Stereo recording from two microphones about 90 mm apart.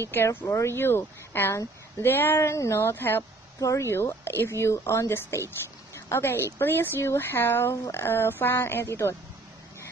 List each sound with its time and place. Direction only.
0.1 s speech: 25° left (ahead or behind)